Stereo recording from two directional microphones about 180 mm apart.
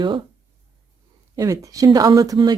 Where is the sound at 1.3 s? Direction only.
20° right (ahead or behind).